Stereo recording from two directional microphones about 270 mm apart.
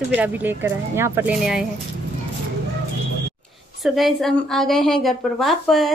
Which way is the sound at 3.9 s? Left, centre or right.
Centre.